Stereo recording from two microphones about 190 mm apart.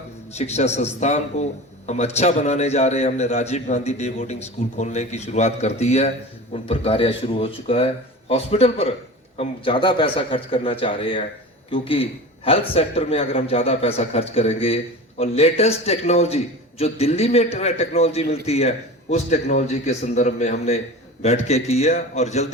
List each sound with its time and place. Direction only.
0.3 s a man's voice: 35° left (ahead or behind)